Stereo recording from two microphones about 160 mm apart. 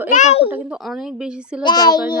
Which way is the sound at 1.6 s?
25° left (ahead or behind).